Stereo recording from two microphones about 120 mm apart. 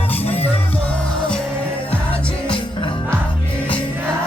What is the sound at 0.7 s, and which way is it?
Music, 10° left (ahead or behind).